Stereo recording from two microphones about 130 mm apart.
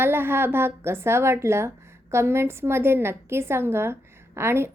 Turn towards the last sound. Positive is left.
turn(degrees=-20)  # may be behind; listen again after turning